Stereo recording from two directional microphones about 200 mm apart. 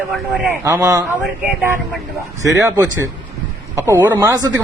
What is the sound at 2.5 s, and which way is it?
A man's voice, 15° right (ahead or behind).